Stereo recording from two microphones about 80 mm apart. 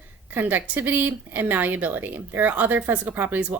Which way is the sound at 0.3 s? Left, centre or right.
Right.